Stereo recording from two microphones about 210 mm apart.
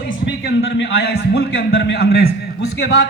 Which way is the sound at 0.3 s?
60° left (ahead or behind).